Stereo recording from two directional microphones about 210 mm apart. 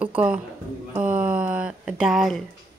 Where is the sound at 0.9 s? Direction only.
5° right (ahead or behind).